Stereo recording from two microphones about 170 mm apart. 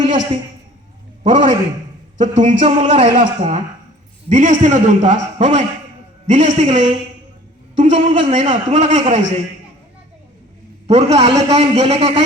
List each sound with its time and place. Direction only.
1.2 s a man's voice: 45° right (ahead or behind)
10.8 s a man's voice: 40° right (ahead or behind)